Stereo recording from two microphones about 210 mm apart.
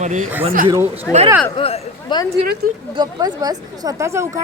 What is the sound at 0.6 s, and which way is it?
Speech, 10° right (ahead or behind).